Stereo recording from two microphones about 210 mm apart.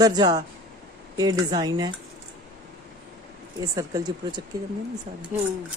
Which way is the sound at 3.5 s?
15° right (ahead or behind).